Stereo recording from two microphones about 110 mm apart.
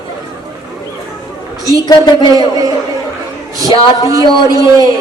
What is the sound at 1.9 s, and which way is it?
Speech, 40° left (ahead or behind).